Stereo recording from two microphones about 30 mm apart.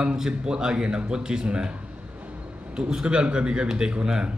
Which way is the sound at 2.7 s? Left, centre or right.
Right.